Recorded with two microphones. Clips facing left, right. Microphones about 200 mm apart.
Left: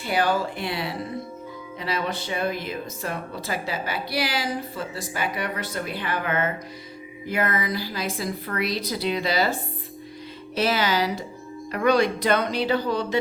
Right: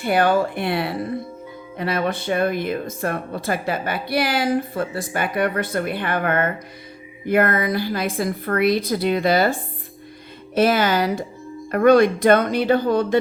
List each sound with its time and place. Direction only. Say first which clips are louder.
0.0 s speech: right 5 dB; 55° right (ahead or behind)